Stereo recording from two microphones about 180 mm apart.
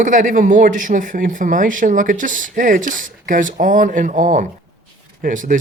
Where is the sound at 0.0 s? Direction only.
45° right (ahead or behind).